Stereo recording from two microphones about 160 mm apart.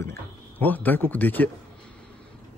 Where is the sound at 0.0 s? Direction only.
15° left (ahead or behind).